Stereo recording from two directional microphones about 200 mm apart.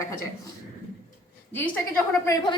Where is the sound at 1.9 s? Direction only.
10° left (ahead or behind).